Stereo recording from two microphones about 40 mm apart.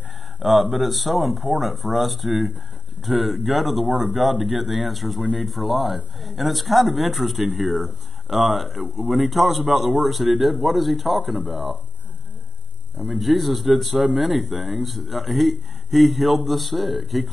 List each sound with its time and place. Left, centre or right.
0.4 s speech: centre
8.8 s speech: right
9.1 s speech: centre
13.2 s speech: centre